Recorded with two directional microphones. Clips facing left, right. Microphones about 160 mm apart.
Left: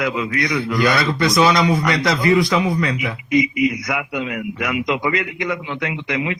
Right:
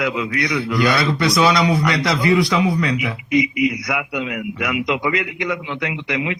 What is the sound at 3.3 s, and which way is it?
A man's voice, 45° left (ahead or behind).